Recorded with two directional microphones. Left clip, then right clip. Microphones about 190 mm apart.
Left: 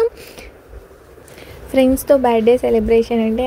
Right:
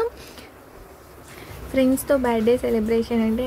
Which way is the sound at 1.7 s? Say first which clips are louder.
Left 7 dB; 25° left (ahead or behind).